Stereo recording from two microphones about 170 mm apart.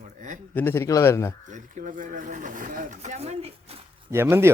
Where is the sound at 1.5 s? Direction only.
50° right (ahead or behind).